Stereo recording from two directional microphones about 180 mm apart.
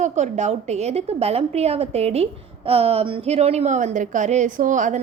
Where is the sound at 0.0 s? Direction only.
40° right (ahead or behind).